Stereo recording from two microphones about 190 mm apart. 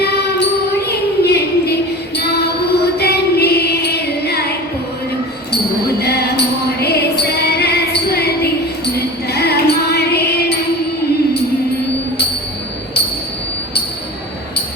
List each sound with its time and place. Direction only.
0.9 s a sound: 60° left (ahead or behind)
2.1 s child singing: 60° left (ahead or behind)
6.0 s music: 60° left (ahead or behind)